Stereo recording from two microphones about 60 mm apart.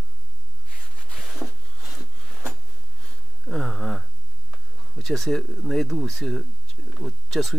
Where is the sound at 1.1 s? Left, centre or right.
Centre.